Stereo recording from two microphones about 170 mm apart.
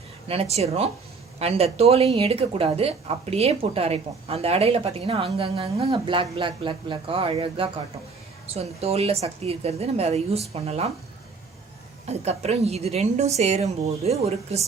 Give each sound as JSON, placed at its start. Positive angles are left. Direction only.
{"t": 0.3, "sound": "speech", "side_deg": -35}
{"t": 12.0, "sound": "speech", "side_deg": -40}